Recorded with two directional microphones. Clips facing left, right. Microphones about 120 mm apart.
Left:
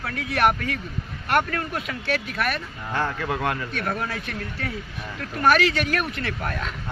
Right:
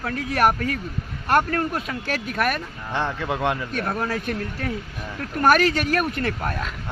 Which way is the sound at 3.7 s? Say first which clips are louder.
Right 3 dB; 45° right (ahead or behind).